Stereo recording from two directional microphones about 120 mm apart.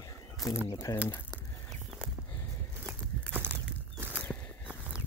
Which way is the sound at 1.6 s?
Centre (ahead or behind).